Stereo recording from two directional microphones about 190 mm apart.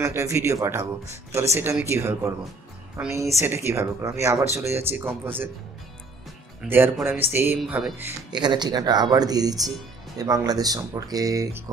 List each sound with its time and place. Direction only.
0.0 s speech: 15° right (ahead or behind)
6.7 s speech: 10° right (ahead or behind)
8.3 s speech: 20° right (ahead or behind)